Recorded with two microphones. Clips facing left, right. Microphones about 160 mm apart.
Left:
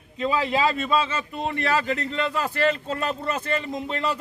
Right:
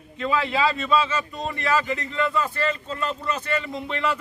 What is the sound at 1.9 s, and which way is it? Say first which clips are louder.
Speech: left 2 dB; 65° left (ahead or behind).